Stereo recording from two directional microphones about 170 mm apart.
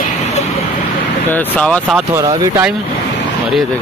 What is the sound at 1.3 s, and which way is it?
Speech, 10° left (ahead or behind).